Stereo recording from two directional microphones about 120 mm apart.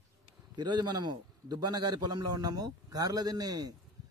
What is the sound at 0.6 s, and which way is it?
A man's voice, 35° right (ahead or behind).